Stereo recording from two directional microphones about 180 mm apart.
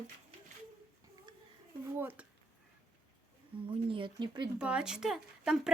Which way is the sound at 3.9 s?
25° right (ahead or behind).